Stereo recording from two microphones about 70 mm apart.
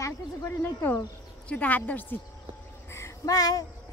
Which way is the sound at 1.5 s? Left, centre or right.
Left.